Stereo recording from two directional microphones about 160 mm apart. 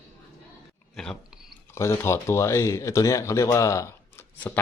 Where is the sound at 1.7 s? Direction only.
15° left (ahead or behind).